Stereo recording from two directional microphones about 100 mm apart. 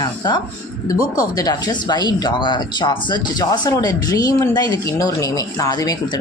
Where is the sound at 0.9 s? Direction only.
35° left (ahead or behind).